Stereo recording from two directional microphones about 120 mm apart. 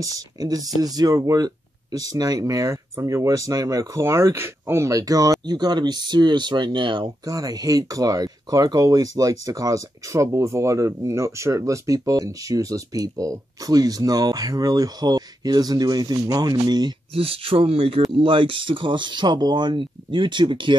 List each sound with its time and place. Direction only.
0.0 s speech: 30° right (ahead or behind)
7.2 s speech: 30° right (ahead or behind)
17.1 s speech: 55° right (ahead or behind)